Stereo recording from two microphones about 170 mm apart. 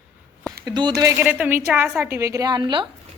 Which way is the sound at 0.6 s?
25° right (ahead or behind).